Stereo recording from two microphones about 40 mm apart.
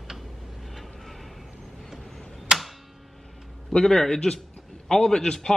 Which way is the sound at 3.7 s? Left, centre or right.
Centre.